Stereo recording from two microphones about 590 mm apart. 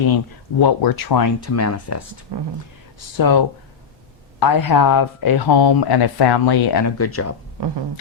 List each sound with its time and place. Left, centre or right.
0.6 s speech: left
2.3 s speech: right
3.2 s speech: left
7.0 s speech: left
7.6 s a sound: right